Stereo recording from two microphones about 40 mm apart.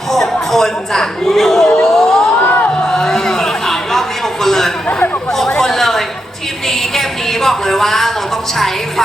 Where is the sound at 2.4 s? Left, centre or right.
Left.